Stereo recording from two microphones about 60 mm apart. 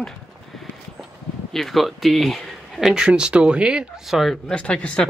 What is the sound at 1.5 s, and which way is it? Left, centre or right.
Speech, centre.